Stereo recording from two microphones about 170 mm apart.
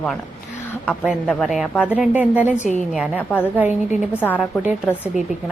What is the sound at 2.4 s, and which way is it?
Speech, 45° left (ahead or behind).